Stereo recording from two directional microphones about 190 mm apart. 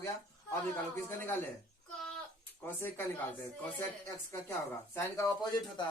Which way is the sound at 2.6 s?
10° left (ahead or behind).